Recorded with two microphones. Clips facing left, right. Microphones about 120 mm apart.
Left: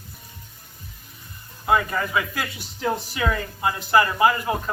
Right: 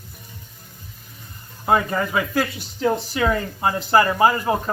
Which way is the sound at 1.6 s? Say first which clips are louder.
Right 2 dB; 30° right (ahead or behind).